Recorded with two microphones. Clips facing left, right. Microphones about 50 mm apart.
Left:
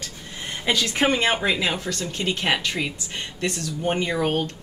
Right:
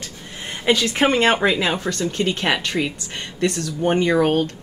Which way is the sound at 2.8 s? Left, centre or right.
Right.